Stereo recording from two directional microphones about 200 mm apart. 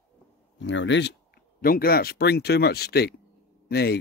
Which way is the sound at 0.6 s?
65° left (ahead or behind).